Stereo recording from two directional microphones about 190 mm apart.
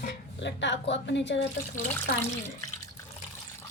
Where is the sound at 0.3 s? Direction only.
70° left (ahead or behind).